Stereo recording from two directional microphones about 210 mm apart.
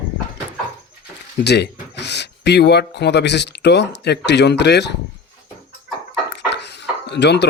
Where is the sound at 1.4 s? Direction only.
55° left (ahead or behind).